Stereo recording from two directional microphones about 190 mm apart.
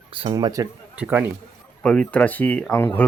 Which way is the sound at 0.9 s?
10° right (ahead or behind).